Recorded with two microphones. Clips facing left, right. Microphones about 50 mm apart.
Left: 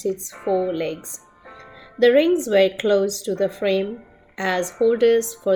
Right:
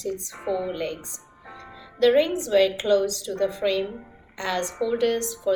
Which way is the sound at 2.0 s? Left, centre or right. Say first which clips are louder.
Left 4 dB; left.